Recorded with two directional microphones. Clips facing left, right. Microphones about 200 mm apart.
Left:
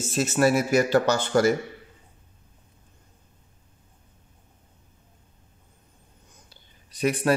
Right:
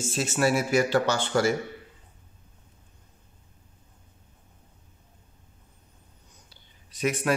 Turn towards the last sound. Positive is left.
turn(degrees=35)  # may be behind; listen again after turning